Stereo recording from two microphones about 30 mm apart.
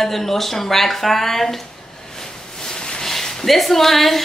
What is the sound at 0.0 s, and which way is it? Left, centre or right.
A woman's voice, centre.